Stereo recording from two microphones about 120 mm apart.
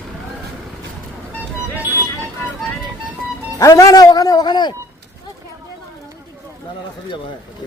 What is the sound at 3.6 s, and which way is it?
A man's voice, 30° left (ahead or behind).